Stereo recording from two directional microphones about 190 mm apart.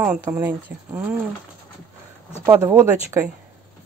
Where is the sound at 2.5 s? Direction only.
15° right (ahead or behind).